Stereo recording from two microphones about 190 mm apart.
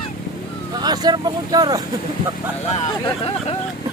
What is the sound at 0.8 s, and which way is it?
Speech, 20° right (ahead or behind).